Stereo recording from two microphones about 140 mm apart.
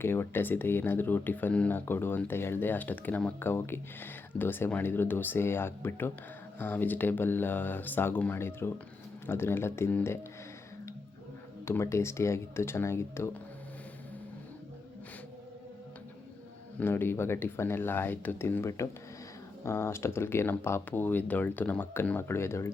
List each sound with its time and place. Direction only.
0.0 s speech: 15° left (ahead or behind)
11.6 s speech: 20° left (ahead or behind)
16.8 s speech: 15° left (ahead or behind)